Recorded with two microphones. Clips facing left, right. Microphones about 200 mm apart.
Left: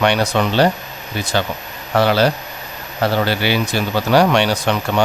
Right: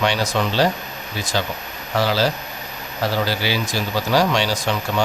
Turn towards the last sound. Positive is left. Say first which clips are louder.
# left 4 dB
turn(degrees=65)  # may be behind; listen again after turning